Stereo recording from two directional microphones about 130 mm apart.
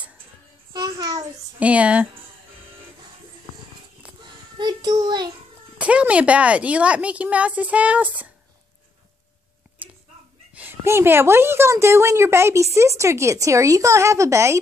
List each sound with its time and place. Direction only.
0.7 s a child's voice: 30° right (ahead or behind)
1.6 s a woman's voice: 10° right (ahead or behind)
4.2 s child singing: 35° right (ahead or behind)
5.8 s a woman's voice: 10° right (ahead or behind)
10.5 s a woman's voice: 15° right (ahead or behind)